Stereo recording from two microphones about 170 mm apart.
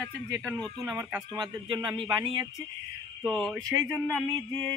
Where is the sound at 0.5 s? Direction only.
5° left (ahead or behind).